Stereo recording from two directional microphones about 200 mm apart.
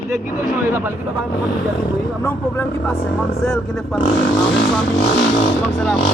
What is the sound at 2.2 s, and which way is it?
A man's voice, 10° left (ahead or behind).